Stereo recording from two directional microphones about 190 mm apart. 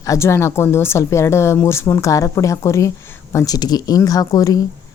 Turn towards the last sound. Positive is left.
turn(degrees=20)  # may be behind; listen again after turning